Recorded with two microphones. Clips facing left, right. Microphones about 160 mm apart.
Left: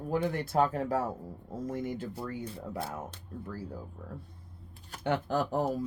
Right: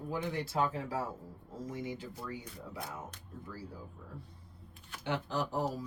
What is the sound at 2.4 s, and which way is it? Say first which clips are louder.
Speech: left 7 dB; 30° left (ahead or behind).